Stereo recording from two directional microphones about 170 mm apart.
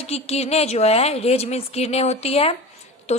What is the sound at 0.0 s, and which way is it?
A woman's voice, 35° left (ahead or behind).